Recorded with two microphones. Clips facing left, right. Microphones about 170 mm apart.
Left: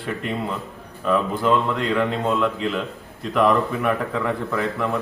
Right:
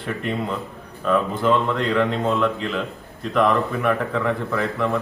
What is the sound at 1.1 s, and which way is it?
Speech, 5° left (ahead or behind).